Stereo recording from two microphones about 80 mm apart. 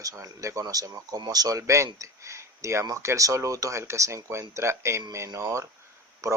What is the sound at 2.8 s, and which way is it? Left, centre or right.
Speech, right.